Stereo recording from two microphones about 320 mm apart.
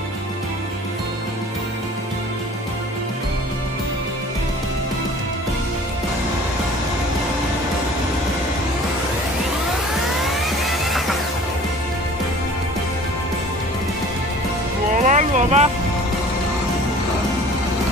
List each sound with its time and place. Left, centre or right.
10.2 s music: centre
15.0 s music: right